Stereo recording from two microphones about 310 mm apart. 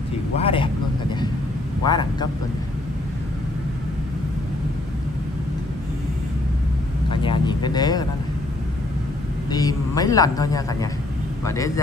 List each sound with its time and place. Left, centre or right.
0.4 s a man's voice: centre
1.9 s a man's voice: centre
7.1 s a man's voice: centre
9.5 s a man's voice: centre